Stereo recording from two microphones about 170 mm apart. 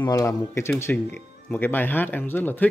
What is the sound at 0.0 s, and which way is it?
Speech, 20° left (ahead or behind).